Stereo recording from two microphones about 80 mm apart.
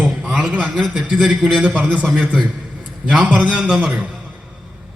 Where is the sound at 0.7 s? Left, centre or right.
Centre.